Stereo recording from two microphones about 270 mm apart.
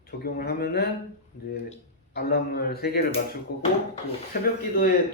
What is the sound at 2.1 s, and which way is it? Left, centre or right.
Speech, left.